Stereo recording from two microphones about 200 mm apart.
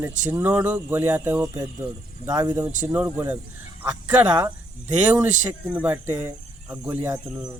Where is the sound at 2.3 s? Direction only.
20° right (ahead or behind).